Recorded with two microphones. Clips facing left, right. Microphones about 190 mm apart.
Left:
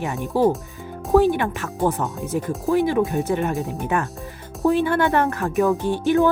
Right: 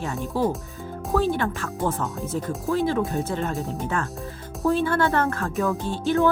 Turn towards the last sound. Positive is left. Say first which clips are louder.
# left 3 dB
turn(degrees=15)  # may be behind; listen again after turning